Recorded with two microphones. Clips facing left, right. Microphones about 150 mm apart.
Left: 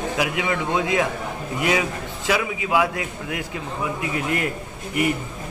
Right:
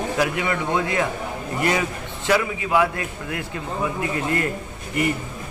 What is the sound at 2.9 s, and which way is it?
A man's voice, 90° left.